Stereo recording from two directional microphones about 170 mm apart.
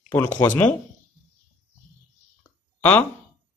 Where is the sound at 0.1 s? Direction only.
15° left (ahead or behind).